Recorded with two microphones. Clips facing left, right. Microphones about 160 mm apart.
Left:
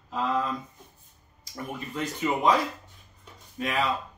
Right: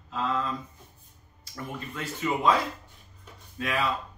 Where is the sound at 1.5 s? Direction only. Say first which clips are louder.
Left 3 dB; 20° left (ahead or behind).